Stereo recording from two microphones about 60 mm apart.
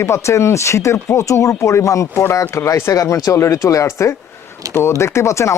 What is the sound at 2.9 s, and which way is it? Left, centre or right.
Speech, left.